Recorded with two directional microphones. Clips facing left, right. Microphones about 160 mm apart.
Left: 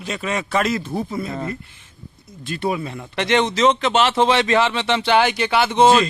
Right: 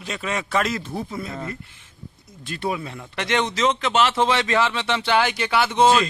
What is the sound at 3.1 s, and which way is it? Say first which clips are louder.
A man's voice: left 5 dB; 25° left (ahead or behind).